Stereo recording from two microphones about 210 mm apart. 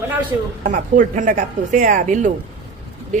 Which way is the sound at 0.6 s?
35° right (ahead or behind).